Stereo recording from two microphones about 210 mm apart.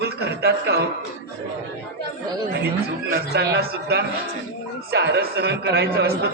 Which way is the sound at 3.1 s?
50° right (ahead or behind).